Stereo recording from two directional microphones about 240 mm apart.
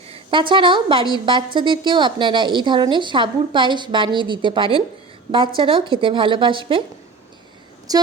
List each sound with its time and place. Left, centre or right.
0.1 s a woman's voice: right
7.9 s speech: centre